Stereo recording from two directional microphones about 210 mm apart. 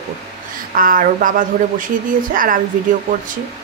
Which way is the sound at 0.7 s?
40° right (ahead or behind).